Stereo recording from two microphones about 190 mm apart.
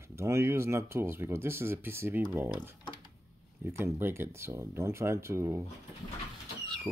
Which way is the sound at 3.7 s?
10° right (ahead or behind).